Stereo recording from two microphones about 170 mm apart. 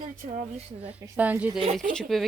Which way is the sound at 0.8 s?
10° right (ahead or behind).